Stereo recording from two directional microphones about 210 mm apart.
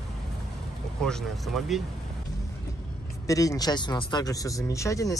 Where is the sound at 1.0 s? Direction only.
5° left (ahead or behind).